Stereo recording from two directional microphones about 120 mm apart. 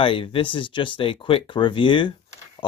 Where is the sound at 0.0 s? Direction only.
50° left (ahead or behind).